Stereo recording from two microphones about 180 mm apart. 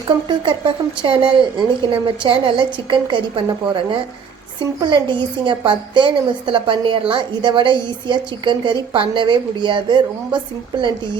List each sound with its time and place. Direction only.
0.3 s a woman's voice: 25° right (ahead or behind)
4.8 s a woman's voice: 25° right (ahead or behind)